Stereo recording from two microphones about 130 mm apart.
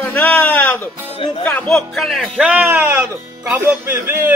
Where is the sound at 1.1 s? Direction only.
40° left (ahead or behind).